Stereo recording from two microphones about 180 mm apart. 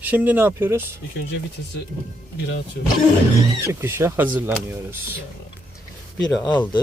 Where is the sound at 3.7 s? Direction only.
10° right (ahead or behind).